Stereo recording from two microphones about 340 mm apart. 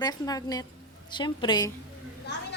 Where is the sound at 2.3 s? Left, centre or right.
Left.